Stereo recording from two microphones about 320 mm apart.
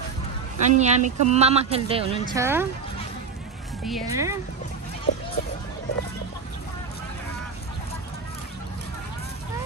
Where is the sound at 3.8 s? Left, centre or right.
Centre.